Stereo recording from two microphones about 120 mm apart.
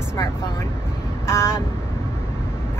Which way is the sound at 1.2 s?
20° left (ahead or behind).